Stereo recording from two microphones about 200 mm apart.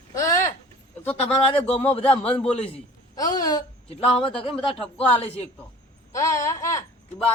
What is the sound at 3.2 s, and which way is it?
Speech, 20° left (ahead or behind).